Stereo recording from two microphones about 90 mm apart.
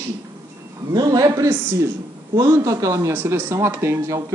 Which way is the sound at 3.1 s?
25° right (ahead or behind).